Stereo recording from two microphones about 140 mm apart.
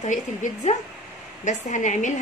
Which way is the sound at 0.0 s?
60° left (ahead or behind).